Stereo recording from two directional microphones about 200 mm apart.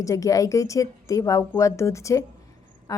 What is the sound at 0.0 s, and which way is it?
A woman's voice, 15° left (ahead or behind).